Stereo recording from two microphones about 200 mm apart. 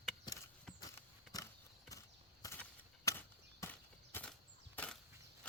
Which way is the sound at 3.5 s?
10° left (ahead or behind).